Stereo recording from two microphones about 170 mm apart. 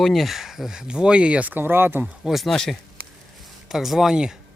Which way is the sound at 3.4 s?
Centre (ahead or behind).